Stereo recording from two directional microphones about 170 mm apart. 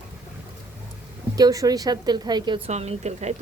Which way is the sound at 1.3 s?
20° right (ahead or behind).